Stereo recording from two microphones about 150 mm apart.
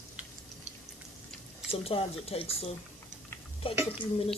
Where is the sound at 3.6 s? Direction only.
35° left (ahead or behind).